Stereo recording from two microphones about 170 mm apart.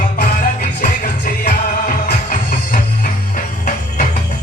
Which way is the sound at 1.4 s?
50° left (ahead or behind).